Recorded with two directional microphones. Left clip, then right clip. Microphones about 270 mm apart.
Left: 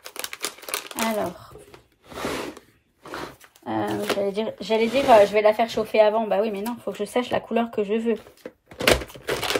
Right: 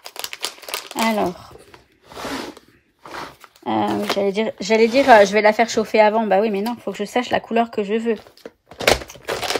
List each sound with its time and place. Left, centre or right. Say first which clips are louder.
0.0 s crumpling: right 4 dB; centre
3.6 s speech: right 5 dB; right
8.7 s a sound: right 2 dB; centre